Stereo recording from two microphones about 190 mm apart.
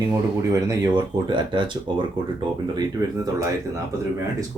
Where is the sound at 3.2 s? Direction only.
15° right (ahead or behind).